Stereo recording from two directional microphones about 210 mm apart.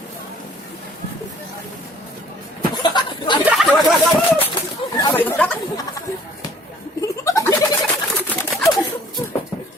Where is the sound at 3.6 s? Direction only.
5° left (ahead or behind).